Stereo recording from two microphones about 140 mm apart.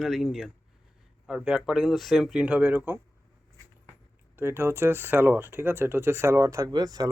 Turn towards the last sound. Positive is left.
turn(degrees=-30)  # may be behind; listen again after turning